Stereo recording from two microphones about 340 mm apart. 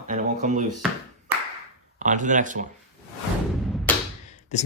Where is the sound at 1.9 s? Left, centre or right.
Right.